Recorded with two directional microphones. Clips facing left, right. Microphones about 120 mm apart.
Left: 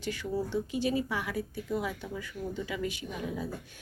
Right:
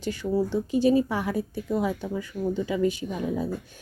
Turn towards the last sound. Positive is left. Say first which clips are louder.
# right 7 dB
turn(degrees=-35)  # may be behind; listen again after turning